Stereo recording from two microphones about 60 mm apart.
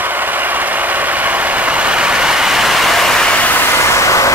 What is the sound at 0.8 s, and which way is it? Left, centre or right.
Vehicle, right.